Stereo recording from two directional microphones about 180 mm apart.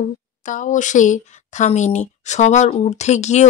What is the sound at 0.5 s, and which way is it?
Speech, 45° left (ahead or behind).